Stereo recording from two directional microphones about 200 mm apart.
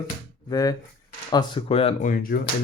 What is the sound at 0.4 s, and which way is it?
Speech, 20° left (ahead or behind).